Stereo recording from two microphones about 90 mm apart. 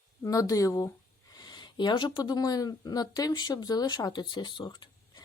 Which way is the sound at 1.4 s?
55° left (ahead or behind).